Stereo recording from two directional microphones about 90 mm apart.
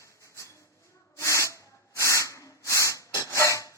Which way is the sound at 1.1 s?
35° left (ahead or behind).